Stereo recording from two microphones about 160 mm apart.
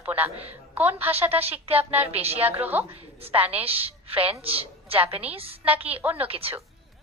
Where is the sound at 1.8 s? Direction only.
10° right (ahead or behind).